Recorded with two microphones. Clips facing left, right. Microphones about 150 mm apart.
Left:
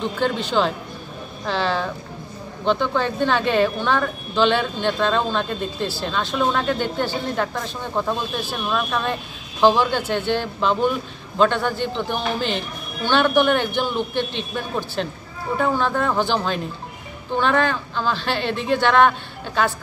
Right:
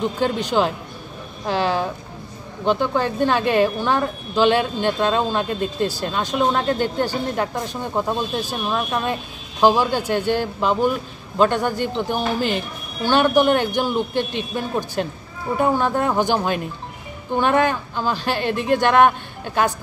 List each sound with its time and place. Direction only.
0.2 s speech: 10° right (ahead or behind)
18.6 s speech: 50° right (ahead or behind)
18.9 s speech: 10° right (ahead or behind)